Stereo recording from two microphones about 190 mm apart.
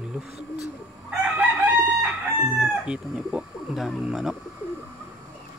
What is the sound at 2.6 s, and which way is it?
Speech, 5° right (ahead or behind).